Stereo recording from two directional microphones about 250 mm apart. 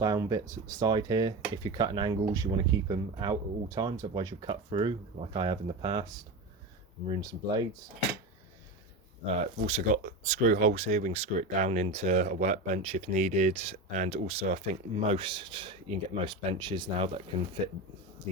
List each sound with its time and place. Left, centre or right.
0.0 s speech: centre
7.1 s speech: centre
9.2 s speech: right